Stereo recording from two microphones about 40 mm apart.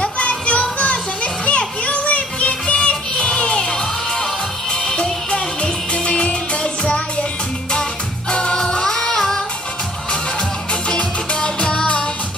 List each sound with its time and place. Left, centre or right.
0.0 s children playing: left
4.8 s music: centre
8.3 s music: left
10.9 s music: left